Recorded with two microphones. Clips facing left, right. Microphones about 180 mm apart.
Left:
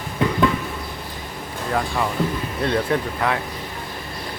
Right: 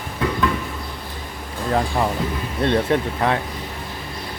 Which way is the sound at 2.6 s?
25° right (ahead or behind).